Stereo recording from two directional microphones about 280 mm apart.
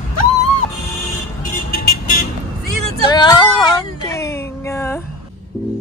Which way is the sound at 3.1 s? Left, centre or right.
Centre.